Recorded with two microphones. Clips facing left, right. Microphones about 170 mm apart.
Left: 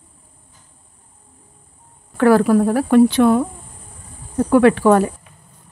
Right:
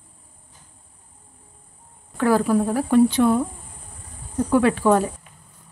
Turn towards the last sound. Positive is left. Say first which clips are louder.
# left 5 dB
turn(degrees=65)  # may be behind; listen again after turning